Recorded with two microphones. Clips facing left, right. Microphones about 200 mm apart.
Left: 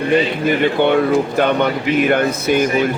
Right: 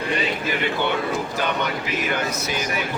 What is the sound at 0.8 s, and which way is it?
A man's voice, 60° left (ahead or behind).